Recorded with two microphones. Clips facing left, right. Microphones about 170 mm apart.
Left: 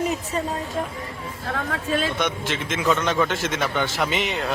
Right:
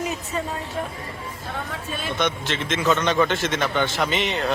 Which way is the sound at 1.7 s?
90° left.